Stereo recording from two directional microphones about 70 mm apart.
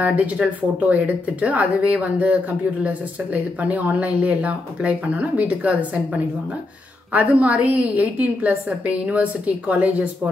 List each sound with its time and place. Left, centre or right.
0.0 s speech: centre
7.1 s speech: centre